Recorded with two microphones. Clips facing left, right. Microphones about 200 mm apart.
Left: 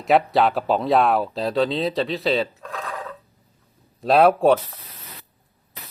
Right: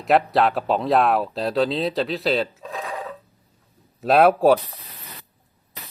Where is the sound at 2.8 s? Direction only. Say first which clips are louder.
Right 2 dB; 20° right (ahead or behind).